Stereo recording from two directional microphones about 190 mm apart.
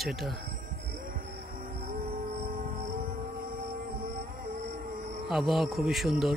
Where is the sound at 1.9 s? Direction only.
40° right (ahead or behind).